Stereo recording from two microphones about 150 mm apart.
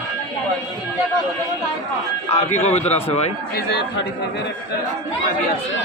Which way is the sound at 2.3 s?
45° left (ahead or behind).